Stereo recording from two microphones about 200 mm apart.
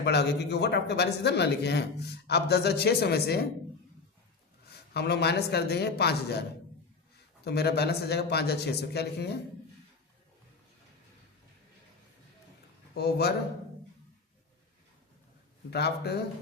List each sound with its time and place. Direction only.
0.0 s speech: 55° left (ahead or behind)
4.7 s speech: 55° left (ahead or behind)
7.4 s speech: 55° left (ahead or behind)
12.9 s speech: 55° left (ahead or behind)
15.7 s speech: 55° left (ahead or behind)